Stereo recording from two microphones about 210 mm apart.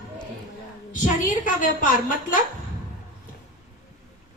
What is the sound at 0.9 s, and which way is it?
A woman's voice, 40° left (ahead or behind).